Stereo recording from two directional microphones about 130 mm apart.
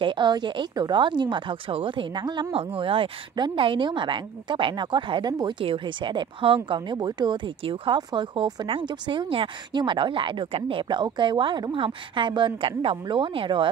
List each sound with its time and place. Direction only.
0.0 s a woman's voice: 35° right (ahead or behind)
2.5 s a woman's voice: 45° right (ahead or behind)